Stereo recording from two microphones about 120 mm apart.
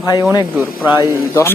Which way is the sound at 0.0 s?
30° left (ahead or behind).